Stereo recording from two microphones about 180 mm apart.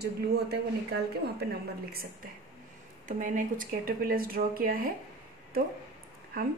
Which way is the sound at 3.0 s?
45° right (ahead or behind).